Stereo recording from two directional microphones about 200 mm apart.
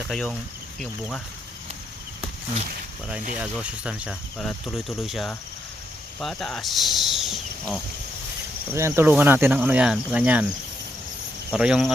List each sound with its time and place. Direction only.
0.1 s speech: 5° left (ahead or behind)
3.3 s speech: 5° right (ahead or behind)
8.7 s cricket: 10° right (ahead or behind)
11.5 s speech: 5° right (ahead or behind)